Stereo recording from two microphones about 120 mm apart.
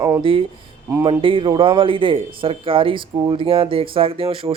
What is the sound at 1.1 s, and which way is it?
A man's voice, 45° right (ahead or behind).